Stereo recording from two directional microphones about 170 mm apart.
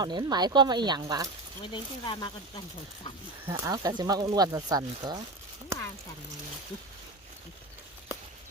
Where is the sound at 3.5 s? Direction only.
20° right (ahead or behind).